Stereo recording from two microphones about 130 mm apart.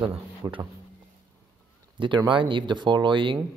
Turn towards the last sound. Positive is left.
turn(degrees=-40)  # may be behind; listen again after turning